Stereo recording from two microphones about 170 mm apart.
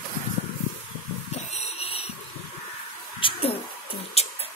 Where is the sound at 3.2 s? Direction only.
30° left (ahead or behind).